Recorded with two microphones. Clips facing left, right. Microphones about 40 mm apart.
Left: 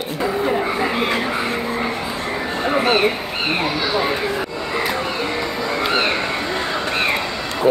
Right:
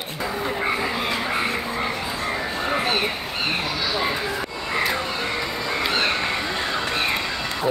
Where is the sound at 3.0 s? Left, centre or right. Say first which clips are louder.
Left 5 dB; left.